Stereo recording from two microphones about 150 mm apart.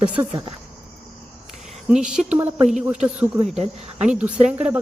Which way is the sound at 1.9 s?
5° right (ahead or behind).